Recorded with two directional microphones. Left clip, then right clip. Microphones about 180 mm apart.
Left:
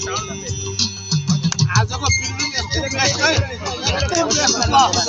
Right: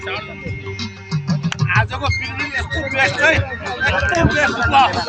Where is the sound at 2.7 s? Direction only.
15° right (ahead or behind).